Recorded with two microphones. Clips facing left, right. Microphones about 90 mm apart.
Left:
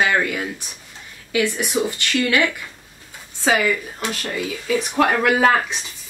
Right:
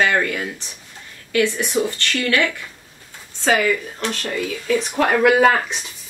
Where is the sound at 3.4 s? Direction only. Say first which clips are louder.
Right 1 dB; 5° left (ahead or behind).